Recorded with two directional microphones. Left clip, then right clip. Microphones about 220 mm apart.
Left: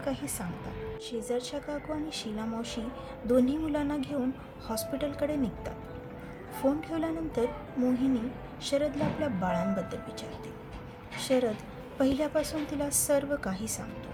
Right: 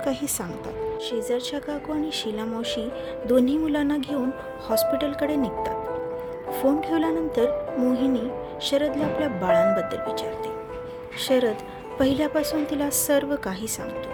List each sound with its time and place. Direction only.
0.0 s speech: 45° right (ahead or behind)
1.3 s speech: 30° right (ahead or behind)